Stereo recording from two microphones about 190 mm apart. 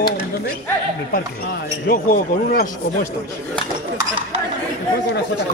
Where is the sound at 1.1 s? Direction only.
50° left (ahead or behind).